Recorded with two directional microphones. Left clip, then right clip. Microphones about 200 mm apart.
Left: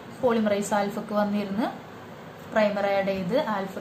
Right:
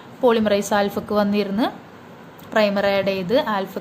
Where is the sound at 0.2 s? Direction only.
50° right (ahead or behind).